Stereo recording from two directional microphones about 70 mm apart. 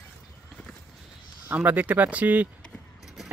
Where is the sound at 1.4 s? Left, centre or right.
Right.